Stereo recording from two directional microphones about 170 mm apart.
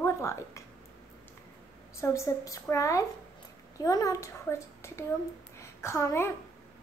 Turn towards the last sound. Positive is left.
turn(degrees=15)  # may be behind; listen again after turning